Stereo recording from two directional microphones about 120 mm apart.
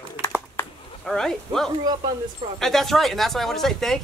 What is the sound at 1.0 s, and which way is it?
Speech, 5° left (ahead or behind).